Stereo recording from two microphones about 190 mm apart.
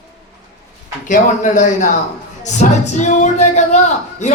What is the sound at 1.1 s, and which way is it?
Speech, 40° left (ahead or behind).